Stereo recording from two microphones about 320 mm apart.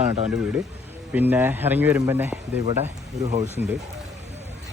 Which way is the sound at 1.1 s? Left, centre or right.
Centre.